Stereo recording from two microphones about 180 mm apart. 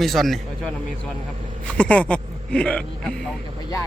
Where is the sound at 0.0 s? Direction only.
Centre (ahead or behind).